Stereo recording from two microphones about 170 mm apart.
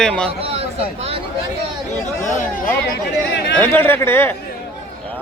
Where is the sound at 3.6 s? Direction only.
15° left (ahead or behind).